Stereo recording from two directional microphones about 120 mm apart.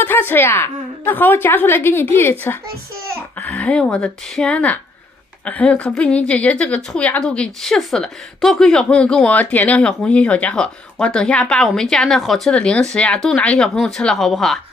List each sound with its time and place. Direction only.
0.0 s a woman's voice: 15° left (ahead or behind); by 14.6 s centre (ahead or behind)